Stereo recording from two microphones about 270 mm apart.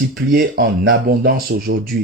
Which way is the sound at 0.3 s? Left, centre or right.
Right.